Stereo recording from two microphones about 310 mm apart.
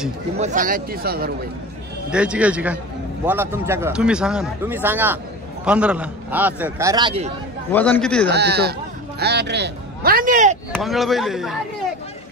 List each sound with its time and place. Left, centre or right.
0.4 s a man's voice: right
2.0 s a man's voice: centre
7.7 s a man's voice: centre
8.3 s a man's voice: right
10.7 s a man's voice: centre